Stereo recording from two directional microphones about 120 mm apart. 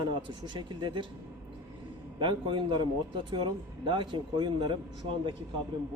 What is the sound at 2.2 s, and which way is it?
Speech, 45° right (ahead or behind).